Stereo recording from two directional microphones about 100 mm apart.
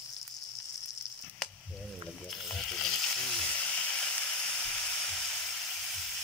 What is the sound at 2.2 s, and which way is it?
Frying, 5° left (ahead or behind).